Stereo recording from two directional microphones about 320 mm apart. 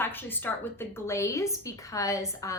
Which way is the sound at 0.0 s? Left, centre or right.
Centre.